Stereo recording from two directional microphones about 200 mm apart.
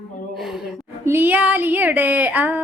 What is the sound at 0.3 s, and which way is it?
Gasp, centre (ahead or behind).